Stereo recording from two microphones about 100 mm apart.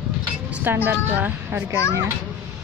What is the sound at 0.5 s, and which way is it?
A woman's voice, 15° right (ahead or behind).